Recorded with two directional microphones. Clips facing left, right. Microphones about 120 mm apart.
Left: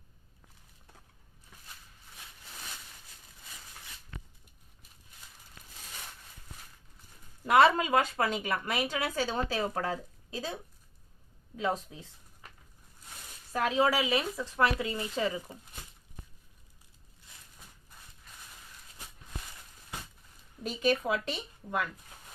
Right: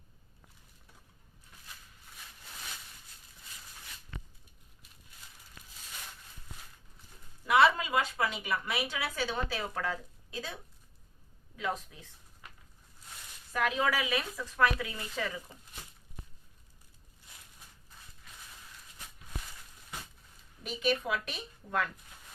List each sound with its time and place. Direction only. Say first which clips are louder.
7.4 s a woman's voice: left 3 dB; 45° left (ahead or behind)
13.5 s speech: left 3 dB; 30° left (ahead or behind)
20.7 s a woman's voice: left 3 dB; 35° left (ahead or behind)